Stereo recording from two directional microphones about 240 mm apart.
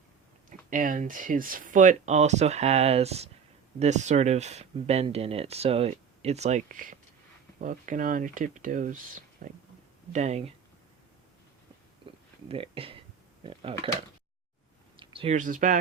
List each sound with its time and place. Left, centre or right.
0.7 s speech: right
12.5 s speech: right
14.9 s speech: right